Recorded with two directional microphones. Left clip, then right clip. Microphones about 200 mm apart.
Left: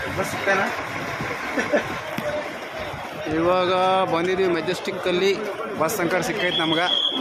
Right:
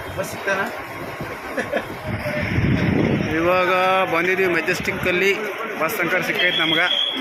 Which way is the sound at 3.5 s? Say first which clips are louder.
Right 2 dB; centre (ahead or behind).